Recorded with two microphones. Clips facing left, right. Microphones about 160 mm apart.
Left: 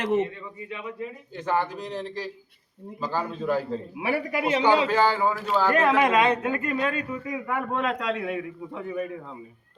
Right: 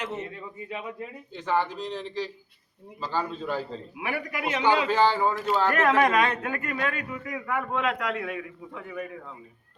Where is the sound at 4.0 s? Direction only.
30° left (ahead or behind).